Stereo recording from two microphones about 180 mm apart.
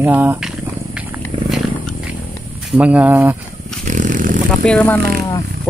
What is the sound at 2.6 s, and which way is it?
Speech, 5° right (ahead or behind).